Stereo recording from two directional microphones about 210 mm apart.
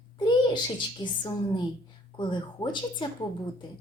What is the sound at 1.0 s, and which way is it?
Speech, 20° left (ahead or behind).